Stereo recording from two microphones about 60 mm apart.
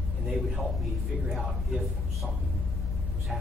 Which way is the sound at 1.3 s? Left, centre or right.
Centre.